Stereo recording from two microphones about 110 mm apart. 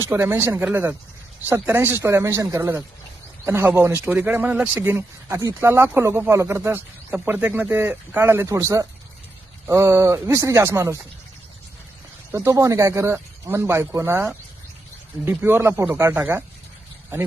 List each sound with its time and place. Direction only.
0.0 s speech: 20° right (ahead or behind)
4.8 s speech: 20° right (ahead or behind)
12.3 s speech: 25° right (ahead or behind)